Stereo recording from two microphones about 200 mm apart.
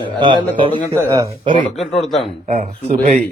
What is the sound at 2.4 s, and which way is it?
Speech, 30° right (ahead or behind).